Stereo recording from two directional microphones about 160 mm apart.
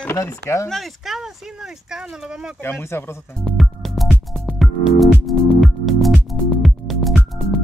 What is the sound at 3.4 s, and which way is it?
Music, centre (ahead or behind).